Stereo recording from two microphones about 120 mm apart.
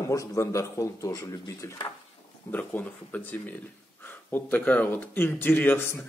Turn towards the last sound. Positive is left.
turn(degrees=20)  # may be behind; listen again after turning